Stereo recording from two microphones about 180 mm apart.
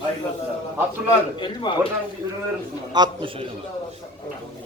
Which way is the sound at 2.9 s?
25° right (ahead or behind).